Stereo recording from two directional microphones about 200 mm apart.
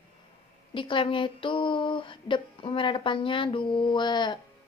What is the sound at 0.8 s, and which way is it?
Speech, 25° left (ahead or behind).